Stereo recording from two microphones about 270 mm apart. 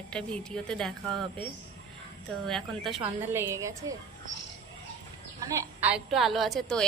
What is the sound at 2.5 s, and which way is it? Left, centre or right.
A woman's voice, centre.